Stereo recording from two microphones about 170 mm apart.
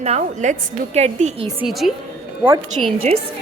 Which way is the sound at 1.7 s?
Centre (ahead or behind).